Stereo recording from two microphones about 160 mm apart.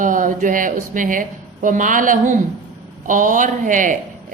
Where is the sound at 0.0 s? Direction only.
55° right (ahead or behind).